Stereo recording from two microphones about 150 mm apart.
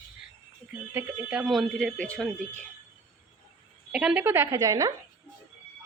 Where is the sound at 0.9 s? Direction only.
10° right (ahead or behind); by 2.2 s 5° left (ahead or behind).